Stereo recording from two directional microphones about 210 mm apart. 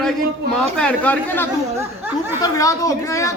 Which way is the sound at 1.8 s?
10° right (ahead or behind).